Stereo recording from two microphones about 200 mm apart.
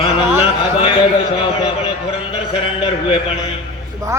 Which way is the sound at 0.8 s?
25° left (ahead or behind).